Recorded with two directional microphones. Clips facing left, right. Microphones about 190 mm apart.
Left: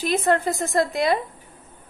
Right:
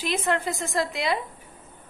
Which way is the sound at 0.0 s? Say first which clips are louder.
Left 5 dB; 40° left (ahead or behind).